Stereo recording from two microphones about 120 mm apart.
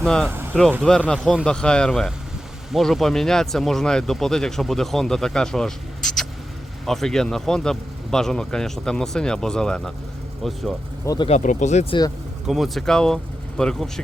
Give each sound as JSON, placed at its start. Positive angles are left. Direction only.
{"t": 0.0, "sound": "speech", "side_deg": 5}
{"t": 0.3, "sound": "speech", "side_deg": -20}
{"t": 0.9, "sound": "speech", "side_deg": 5}
{"t": 11.3, "sound": "speech", "side_deg": 85}
{"t": 11.9, "sound": "speech", "side_deg": 35}
{"t": 12.5, "sound": "speech", "side_deg": 0}